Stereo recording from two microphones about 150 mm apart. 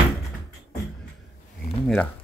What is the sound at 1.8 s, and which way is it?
Speech, 10° left (ahead or behind).